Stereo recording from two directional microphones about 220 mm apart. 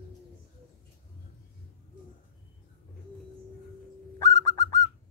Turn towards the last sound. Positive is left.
turn(degrees=15)  # may be behind; listen again after turning